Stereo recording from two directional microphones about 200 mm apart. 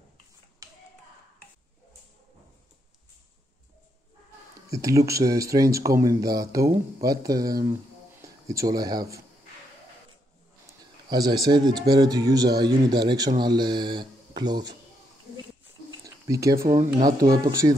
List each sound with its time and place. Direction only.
0.6 s clapping: 15° right (ahead or behind)
4.6 s speech: 15° right (ahead or behind)
11.1 s speech: 20° right (ahead or behind)
16.3 s speech: 15° right (ahead or behind)